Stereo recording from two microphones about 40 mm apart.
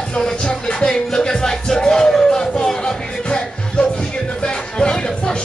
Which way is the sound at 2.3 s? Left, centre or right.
Centre.